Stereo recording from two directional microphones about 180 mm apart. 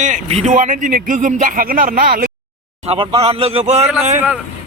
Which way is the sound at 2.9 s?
30° right (ahead or behind).